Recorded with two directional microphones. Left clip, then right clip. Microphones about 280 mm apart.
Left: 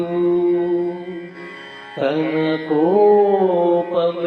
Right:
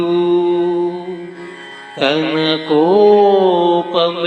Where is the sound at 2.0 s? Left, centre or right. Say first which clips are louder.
Right 4 dB; right.